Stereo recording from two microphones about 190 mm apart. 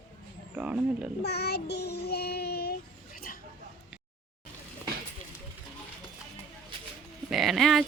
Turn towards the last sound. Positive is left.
turn(degrees=0)  # may be behind; listen again after turning